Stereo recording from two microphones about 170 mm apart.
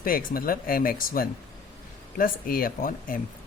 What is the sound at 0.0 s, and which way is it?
Speech, 55° left (ahead or behind).